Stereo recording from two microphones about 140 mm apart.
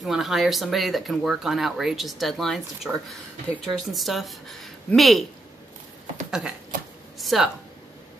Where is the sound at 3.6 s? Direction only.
Centre (ahead or behind).